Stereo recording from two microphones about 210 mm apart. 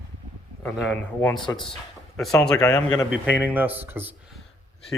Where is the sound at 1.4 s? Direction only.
25° left (ahead or behind).